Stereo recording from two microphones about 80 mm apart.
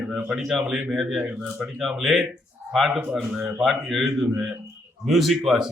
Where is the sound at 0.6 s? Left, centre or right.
Right.